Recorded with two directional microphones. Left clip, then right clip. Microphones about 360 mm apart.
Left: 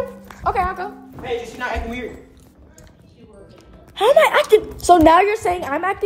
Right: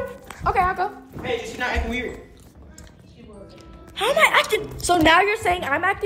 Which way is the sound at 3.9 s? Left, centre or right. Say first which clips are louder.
Left 4 dB; left.